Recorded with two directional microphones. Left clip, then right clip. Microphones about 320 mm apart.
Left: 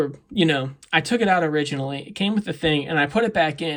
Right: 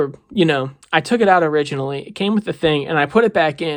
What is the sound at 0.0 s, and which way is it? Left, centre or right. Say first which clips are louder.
Speech: right 4 dB; centre.